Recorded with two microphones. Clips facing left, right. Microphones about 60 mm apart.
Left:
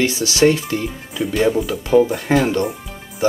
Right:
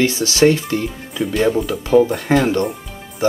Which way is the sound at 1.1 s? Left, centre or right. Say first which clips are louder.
Even; centre.